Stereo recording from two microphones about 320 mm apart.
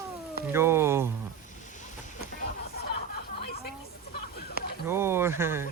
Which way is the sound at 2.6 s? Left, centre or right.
Left.